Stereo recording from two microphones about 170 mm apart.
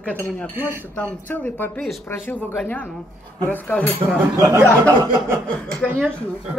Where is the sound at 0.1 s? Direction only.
10° left (ahead or behind).